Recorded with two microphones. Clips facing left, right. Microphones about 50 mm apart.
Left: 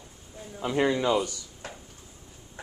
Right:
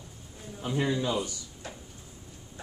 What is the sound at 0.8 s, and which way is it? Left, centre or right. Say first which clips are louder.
Speech: left 5 dB; left.